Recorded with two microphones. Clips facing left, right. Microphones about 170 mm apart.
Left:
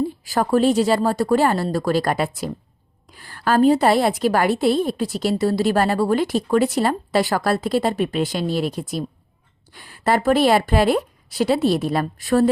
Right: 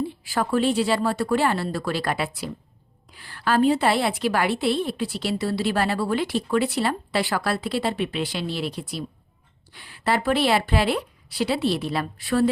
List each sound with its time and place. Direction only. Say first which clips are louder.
0.3 s a woman's voice: left 5 dB; 40° left (ahead or behind)